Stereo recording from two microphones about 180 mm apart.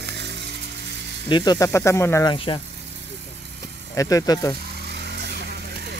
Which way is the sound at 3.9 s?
20° left (ahead or behind).